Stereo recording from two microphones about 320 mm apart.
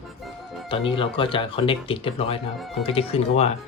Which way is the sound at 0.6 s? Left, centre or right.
Centre.